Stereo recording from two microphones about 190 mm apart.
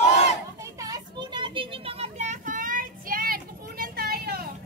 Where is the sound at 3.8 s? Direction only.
50° right (ahead or behind).